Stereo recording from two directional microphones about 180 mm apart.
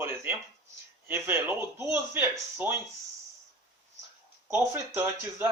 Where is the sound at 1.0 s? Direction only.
10° right (ahead or behind).